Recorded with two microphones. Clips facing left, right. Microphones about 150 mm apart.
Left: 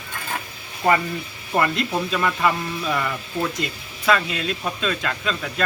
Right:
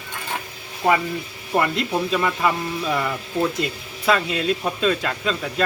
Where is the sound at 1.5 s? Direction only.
5° right (ahead or behind).